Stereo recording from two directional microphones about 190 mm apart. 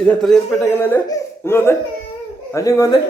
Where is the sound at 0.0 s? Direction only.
5° left (ahead or behind).